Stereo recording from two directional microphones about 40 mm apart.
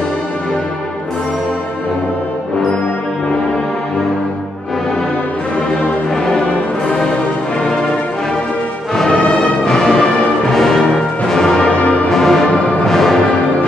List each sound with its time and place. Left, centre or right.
6.2 s music: left
9.7 s music: centre
11.8 s music: left
12.1 s music: centre
12.4 s music: left
12.8 s music: centre